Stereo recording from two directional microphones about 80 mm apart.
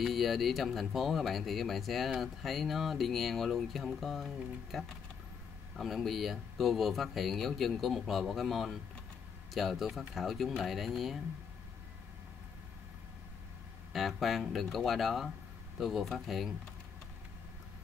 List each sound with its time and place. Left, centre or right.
0.0 s speech: centre
13.9 s speech: centre